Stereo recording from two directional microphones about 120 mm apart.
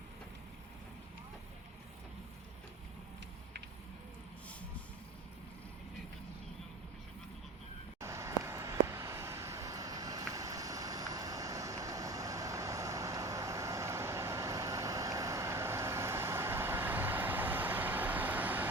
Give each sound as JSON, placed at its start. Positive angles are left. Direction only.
{"t": 8.0, "sound": "vehicle", "side_deg": -25}